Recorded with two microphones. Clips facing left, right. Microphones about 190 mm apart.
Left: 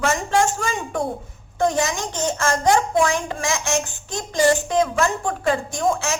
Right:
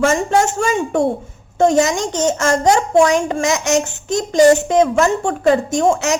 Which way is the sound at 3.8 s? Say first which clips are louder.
Right 10 dB; 20° right (ahead or behind).